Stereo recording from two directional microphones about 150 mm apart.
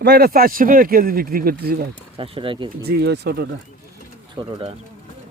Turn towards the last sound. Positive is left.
turn(degrees=-35)  # may be behind; listen again after turning